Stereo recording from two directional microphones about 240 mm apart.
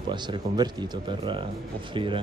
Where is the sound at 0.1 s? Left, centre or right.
Centre.